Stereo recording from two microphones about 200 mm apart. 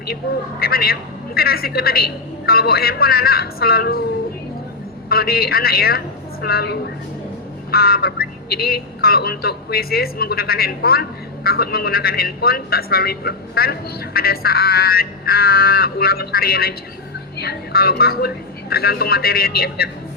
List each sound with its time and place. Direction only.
0.6 s a man's voice: 50° left (ahead or behind)
5.0 s a man's voice: 50° left (ahead or behind)